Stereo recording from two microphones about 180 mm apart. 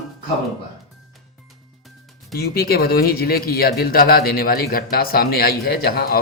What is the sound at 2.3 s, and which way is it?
A man's voice, 60° left (ahead or behind).